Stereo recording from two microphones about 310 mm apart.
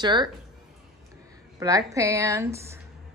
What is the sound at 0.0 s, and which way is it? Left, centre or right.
Speech, centre.